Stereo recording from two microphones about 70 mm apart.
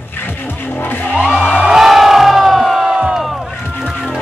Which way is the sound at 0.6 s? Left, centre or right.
Left.